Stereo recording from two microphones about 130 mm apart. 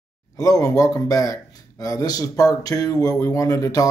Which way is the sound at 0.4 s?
25° left (ahead or behind).